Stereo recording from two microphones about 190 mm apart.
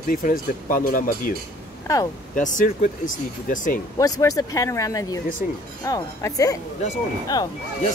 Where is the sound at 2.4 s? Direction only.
45° left (ahead or behind).